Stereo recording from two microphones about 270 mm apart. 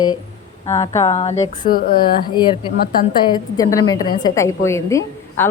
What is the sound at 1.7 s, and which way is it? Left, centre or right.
Speech, left.